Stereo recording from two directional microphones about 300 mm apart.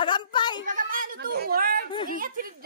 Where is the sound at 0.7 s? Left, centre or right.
Right.